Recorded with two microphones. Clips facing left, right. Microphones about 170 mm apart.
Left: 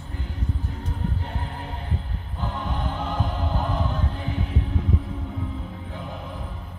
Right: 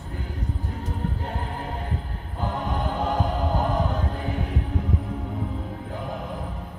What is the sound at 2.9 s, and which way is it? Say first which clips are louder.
Music: right 4 dB; 40° right (ahead or behind).